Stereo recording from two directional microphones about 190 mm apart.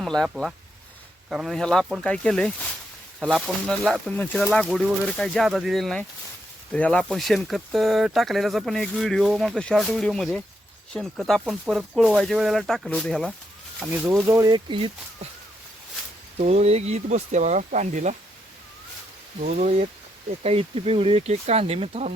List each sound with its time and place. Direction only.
0.0 s speech: centre (ahead or behind)
14.3 s speech: 15° right (ahead or behind)
16.4 s speech: 35° right (ahead or behind)
19.4 s speech: 40° right (ahead or behind)